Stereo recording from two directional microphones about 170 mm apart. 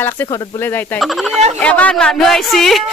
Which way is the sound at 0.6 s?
10° left (ahead or behind).